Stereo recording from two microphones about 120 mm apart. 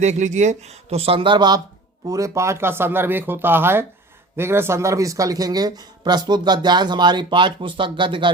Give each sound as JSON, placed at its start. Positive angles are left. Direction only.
{"t": 0.0, "sound": "speech", "side_deg": -75}